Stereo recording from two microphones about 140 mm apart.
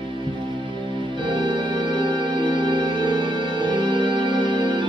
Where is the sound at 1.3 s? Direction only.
35° right (ahead or behind).